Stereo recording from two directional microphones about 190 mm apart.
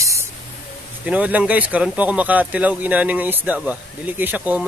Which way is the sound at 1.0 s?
5° right (ahead or behind).